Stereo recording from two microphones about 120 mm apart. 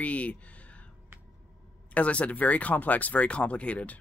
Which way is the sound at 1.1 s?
20° right (ahead or behind).